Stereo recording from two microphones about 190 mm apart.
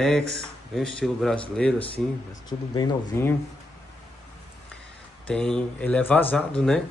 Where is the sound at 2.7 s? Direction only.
20° left (ahead or behind).